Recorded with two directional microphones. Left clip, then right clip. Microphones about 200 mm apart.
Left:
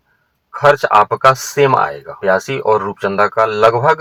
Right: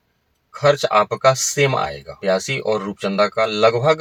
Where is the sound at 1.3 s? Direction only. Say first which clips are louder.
Left 5 dB; 35° left (ahead or behind).